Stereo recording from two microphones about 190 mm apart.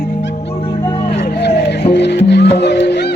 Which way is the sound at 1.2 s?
60° left (ahead or behind).